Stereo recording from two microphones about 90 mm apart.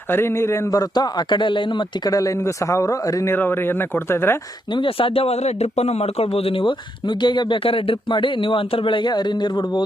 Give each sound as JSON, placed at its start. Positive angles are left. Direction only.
{"t": 0.1, "sound": "speech", "side_deg": 25}
{"t": 0.8, "sound": "speech", "side_deg": 50}
{"t": 2.1, "sound": "a man's voice", "side_deg": 40}
{"t": 3.3, "sound": "speech", "side_deg": 25}
{"t": 4.7, "sound": "speech", "side_deg": 80}